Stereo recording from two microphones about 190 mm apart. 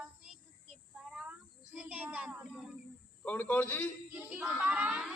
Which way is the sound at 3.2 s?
10° left (ahead or behind).